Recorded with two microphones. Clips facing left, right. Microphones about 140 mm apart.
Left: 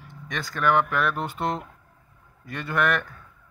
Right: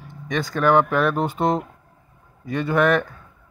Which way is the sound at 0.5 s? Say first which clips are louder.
Right 5 dB; 40° right (ahead or behind).